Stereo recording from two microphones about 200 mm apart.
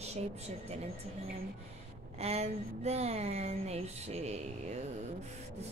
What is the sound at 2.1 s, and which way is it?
A woman's voice, 30° right (ahead or behind).